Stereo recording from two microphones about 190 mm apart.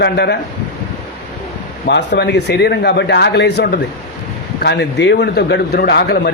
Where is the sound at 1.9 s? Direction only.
65° left (ahead or behind).